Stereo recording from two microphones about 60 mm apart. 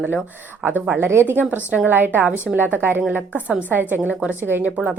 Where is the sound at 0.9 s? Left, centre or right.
Right.